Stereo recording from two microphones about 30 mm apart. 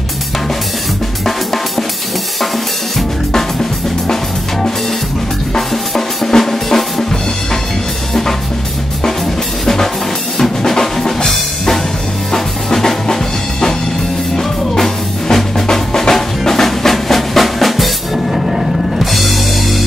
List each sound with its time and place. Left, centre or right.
1.2 s drum kit: centre
4.1 s music: centre
5.5 s drum: centre
10.6 s drum: centre
12.3 s music: centre
15.6 s drum: centre
18.9 s drum kit: centre